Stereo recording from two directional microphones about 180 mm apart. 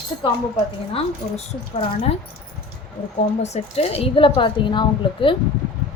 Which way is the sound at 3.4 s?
35° left (ahead or behind).